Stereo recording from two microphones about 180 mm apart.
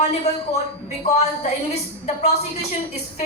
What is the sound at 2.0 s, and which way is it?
Speech, 35° left (ahead or behind).